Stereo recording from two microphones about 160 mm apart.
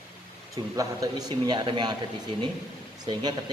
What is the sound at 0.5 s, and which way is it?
A man's voice, 20° right (ahead or behind).